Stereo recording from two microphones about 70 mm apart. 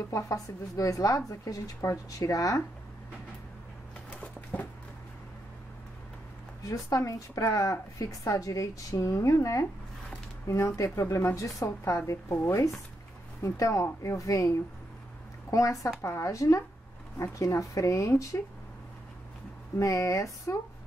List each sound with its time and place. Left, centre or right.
0.1 s speech: left
4.2 s bird: left
6.7 s speech: left
19.8 s speech: left